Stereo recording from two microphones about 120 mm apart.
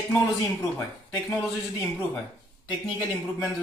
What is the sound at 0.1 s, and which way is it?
Speech, 20° left (ahead or behind).